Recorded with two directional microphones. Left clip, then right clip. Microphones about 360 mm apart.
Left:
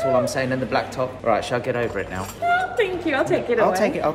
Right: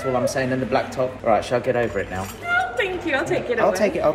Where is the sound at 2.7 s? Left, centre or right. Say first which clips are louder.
Left 1 dB; centre.